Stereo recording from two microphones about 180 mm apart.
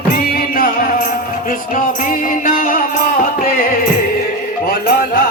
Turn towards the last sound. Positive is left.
turn(degrees=50)  # may be behind; listen again after turning